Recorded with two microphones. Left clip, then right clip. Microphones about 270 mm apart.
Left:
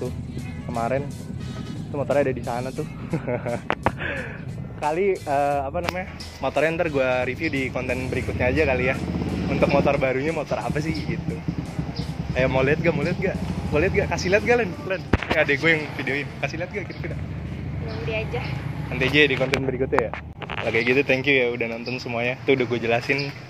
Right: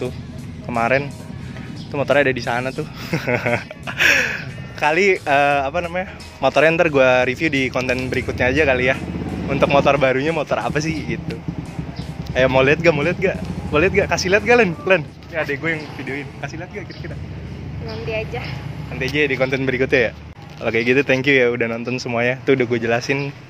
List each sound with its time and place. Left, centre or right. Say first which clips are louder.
0.7 s speech: right 7 dB; right
5.9 s speech: right 6 dB; right
12.4 s speech: right 6 dB; right
14.6 s speech: right 10 dB; right
15.3 s speech: left 2 dB; centre
18.9 s speech: left 1 dB; centre
19.4 s speech: right 5 dB; right
20.6 s speech: right 4 dB; right